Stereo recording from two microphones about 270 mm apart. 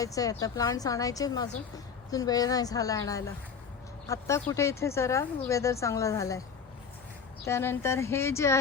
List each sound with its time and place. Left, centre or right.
0.0 s a woman's voice: centre
7.4 s a woman's voice: centre